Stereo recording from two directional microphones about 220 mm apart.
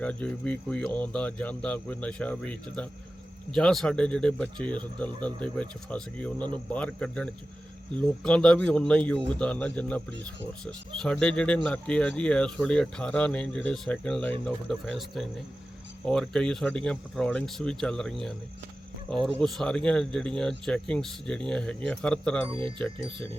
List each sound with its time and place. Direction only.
0.0 s speech: 5° left (ahead or behind)
19.4 s speech: centre (ahead or behind)
22.4 s speech: 25° right (ahead or behind)